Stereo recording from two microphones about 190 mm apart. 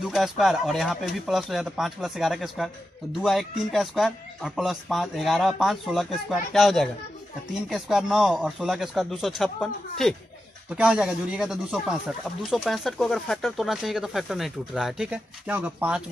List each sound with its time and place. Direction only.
0.0 s speech: centre (ahead or behind)